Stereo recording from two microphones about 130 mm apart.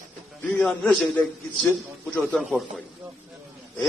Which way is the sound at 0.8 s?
Centre (ahead or behind).